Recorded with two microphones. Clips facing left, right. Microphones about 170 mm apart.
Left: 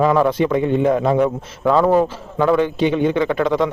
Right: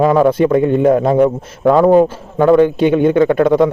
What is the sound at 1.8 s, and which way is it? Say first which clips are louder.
Speech: right 5 dB; 20° right (ahead or behind).